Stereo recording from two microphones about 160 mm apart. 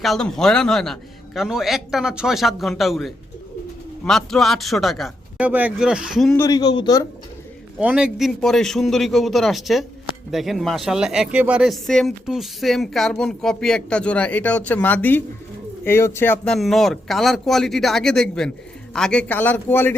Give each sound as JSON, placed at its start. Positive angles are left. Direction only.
{"t": 0.0, "sound": "speech", "side_deg": 0}
{"t": 6.3, "sound": "speech", "side_deg": 20}
{"t": 7.8, "sound": "a man's voice", "side_deg": -5}